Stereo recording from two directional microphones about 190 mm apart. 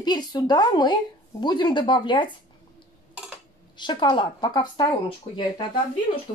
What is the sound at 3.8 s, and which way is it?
A woman's voice, 25° left (ahead or behind).